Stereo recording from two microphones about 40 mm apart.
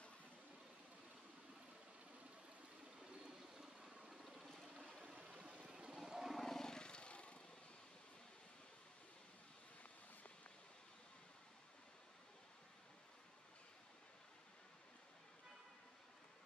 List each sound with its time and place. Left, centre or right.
3.5 s vehicle: centre
4.4 s vehicle: centre
5.0 s stream: right
5.7 s vehicle: right
5.9 s vehicle: centre
6.3 s vehicle: centre; by 7.3 s left